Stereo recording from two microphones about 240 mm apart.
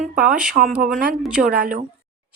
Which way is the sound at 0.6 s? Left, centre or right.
Centre.